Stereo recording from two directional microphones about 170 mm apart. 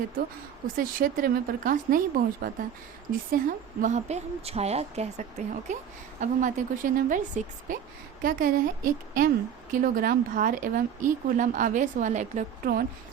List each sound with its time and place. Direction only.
0.8 s a woman's voice: 55° right (ahead or behind)